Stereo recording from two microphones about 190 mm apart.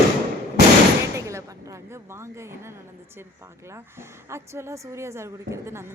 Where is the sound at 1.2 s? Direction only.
15° right (ahead or behind).